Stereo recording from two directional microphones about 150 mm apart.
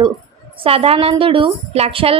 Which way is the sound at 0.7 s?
40° right (ahead or behind).